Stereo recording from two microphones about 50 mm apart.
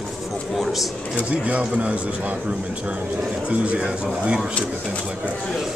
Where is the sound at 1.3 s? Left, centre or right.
Right.